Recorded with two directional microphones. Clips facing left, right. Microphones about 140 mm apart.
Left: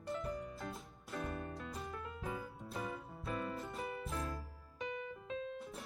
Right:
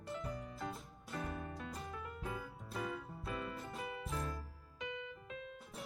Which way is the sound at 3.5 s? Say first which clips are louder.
Left 2 dB; centre (ahead or behind).